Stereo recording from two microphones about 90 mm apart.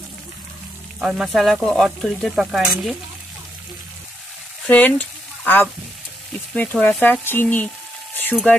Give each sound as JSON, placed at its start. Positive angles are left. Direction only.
{"t": 0.9, "sound": "stir", "side_deg": 0}
{"t": 4.6, "sound": "speech", "side_deg": 20}